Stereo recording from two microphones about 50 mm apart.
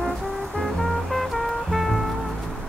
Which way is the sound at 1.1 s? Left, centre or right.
Centre.